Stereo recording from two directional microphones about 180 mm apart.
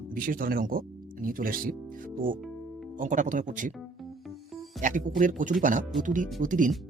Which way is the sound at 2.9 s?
45° right (ahead or behind).